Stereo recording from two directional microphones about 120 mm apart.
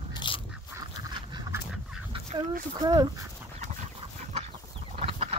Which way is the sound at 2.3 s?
30° right (ahead or behind).